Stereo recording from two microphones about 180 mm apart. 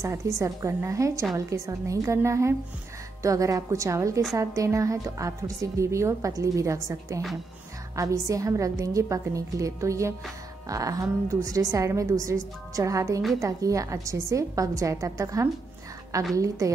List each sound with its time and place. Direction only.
0.0 s a woman's voice: 15° right (ahead or behind)